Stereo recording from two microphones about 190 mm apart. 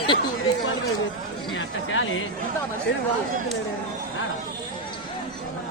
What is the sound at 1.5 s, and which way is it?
Chatter, 90° left.